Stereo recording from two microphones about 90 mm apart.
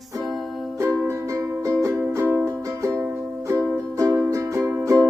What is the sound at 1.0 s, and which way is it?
Music, 35° right (ahead or behind).